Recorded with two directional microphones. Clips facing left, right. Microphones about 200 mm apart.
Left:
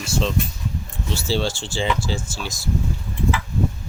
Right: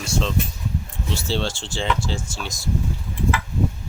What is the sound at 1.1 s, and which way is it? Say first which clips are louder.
Speech: left 2 dB; 5° left (ahead or behind).